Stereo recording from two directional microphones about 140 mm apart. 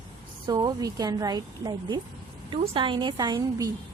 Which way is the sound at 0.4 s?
25° right (ahead or behind).